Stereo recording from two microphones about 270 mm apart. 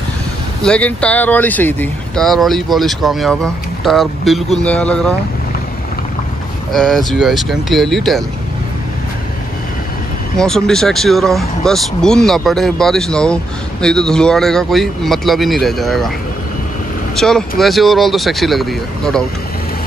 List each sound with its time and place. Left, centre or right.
0.6 s speech: centre
6.7 s speech: centre
10.3 s speech: centre
17.1 s speech: centre